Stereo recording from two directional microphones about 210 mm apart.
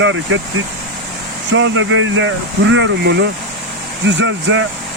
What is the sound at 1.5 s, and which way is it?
Speech, 65° right (ahead or behind).